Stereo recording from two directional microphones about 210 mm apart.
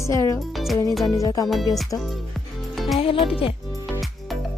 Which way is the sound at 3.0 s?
25° left (ahead or behind).